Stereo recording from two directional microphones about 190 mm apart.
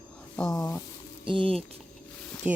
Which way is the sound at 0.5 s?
20° left (ahead or behind).